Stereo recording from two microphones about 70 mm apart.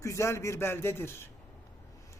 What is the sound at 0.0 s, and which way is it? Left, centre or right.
A woman's voice, left.